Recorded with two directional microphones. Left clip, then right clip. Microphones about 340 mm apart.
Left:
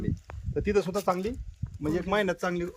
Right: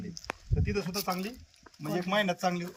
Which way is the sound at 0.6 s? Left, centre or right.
Centre.